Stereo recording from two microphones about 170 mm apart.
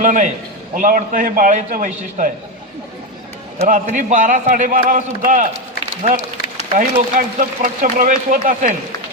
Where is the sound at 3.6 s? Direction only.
50° right (ahead or behind).